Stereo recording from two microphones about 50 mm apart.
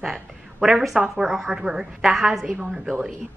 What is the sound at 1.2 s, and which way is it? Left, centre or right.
A woman's voice, centre.